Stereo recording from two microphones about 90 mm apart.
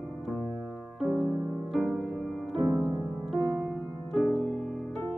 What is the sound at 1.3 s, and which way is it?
Music, 15° right (ahead or behind).